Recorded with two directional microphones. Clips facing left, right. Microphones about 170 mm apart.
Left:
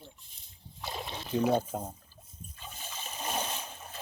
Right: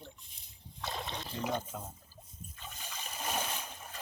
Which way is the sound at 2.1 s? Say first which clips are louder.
Right 2 dB; 40° right (ahead or behind).